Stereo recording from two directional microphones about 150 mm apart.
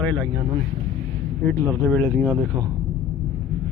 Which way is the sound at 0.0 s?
10° left (ahead or behind).